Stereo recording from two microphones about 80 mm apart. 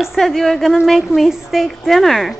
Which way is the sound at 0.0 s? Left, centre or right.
Centre.